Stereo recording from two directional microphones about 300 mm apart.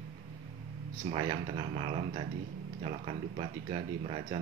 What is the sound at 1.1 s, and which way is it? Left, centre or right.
Speech, centre.